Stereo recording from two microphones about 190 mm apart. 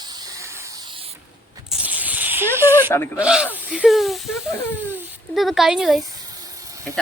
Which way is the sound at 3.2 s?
5° right (ahead or behind).